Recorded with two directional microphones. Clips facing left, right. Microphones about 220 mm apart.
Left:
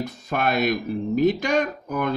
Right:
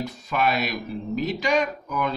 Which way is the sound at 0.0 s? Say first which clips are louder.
Even; 50° left (ahead or behind).